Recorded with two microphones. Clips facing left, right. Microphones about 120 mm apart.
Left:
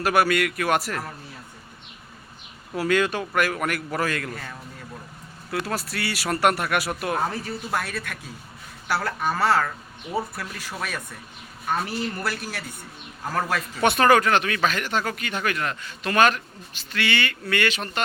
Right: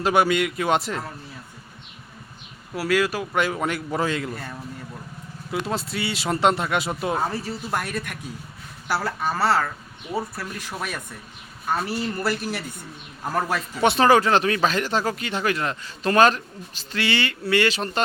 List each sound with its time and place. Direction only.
0.0 s speech: 20° right (ahead or behind)
2.7 s speech: 5° right (ahead or behind)
3.3 s speech: 20° right (ahead or behind)
7.2 s speech: 5° right (ahead or behind)
10.7 s speech: 10° right (ahead or behind)
13.8 s speech: 25° right (ahead or behind)